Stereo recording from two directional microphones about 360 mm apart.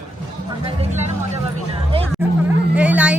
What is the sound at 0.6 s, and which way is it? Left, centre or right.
Vehicle, centre.